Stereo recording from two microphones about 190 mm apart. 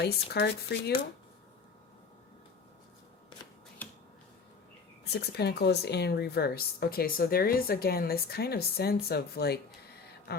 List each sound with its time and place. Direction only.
0.0 s speech: 60° left (ahead or behind)
3.8 s finger snapping: 10° left (ahead or behind)
5.0 s speech: 60° left (ahead or behind)